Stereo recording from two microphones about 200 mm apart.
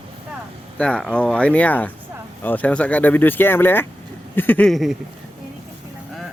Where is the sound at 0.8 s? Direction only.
5° left (ahead or behind).